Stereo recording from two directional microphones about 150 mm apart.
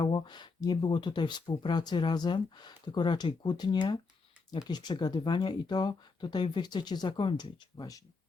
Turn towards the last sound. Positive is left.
turn(degrees=25)  # may be behind; listen again after turning